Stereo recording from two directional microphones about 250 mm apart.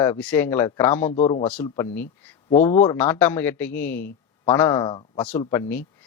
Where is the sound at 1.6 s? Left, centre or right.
Centre.